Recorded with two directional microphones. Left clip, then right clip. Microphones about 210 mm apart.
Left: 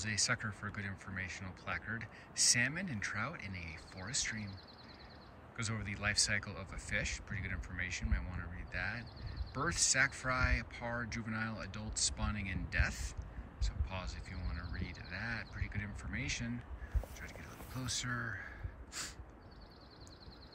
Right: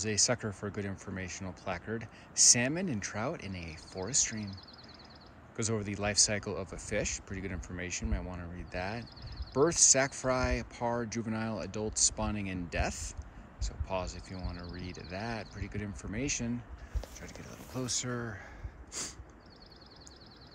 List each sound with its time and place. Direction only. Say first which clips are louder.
0.0 s speech: right 5 dB; 15° right (ahead or behind)
5.6 s speech: right 6 dB; 15° right (ahead or behind)